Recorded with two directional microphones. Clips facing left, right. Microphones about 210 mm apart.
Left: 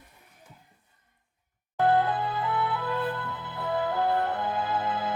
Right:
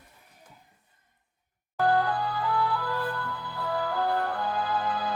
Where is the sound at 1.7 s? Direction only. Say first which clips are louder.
Left 1 dB; 20° left (ahead or behind).